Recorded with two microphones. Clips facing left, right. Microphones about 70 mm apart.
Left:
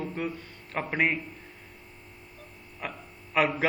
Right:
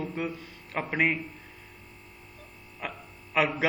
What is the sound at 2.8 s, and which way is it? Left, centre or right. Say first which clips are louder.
Speech: even; centre.